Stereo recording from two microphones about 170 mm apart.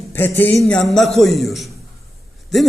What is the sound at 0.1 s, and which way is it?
A man's voice, 10° left (ahead or behind).